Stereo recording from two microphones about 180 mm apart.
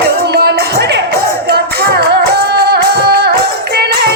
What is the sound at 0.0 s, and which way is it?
Music, 65° right (ahead or behind).